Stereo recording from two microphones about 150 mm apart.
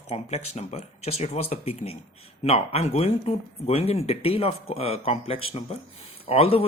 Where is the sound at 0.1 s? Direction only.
45° left (ahead or behind).